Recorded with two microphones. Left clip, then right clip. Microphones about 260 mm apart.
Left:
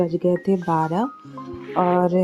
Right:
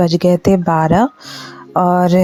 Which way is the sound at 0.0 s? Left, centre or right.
Right.